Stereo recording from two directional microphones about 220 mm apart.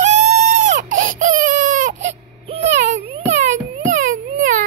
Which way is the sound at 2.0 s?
30° right (ahead or behind).